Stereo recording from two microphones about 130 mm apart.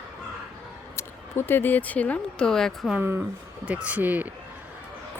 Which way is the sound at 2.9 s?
15° right (ahead or behind).